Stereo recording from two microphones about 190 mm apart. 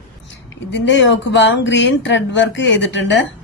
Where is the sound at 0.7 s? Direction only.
70° left (ahead or behind).